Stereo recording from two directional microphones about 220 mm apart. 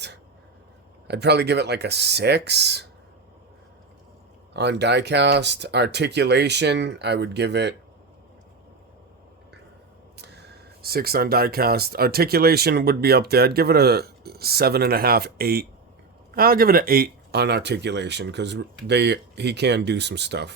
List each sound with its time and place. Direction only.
1.0 s speech: 50° right (ahead or behind)
4.5 s speech: 50° right (ahead or behind)
10.8 s speech: 45° right (ahead or behind)